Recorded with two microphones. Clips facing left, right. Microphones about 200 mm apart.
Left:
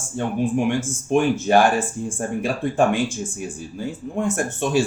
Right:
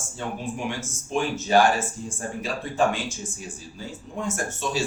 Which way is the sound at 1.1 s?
55° left (ahead or behind).